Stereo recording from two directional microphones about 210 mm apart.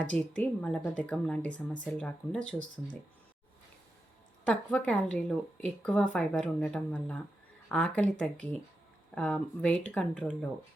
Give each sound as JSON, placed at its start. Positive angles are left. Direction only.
{"t": 0.0, "sound": "a woman's voice", "side_deg": 5}
{"t": 4.4, "sound": "a woman's voice", "side_deg": 5}
{"t": 9.1, "sound": "a woman's voice", "side_deg": 5}